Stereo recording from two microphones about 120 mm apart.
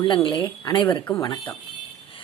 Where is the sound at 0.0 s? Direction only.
45° left (ahead or behind).